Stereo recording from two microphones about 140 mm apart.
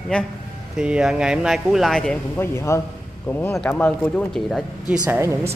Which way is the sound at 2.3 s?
20° left (ahead or behind).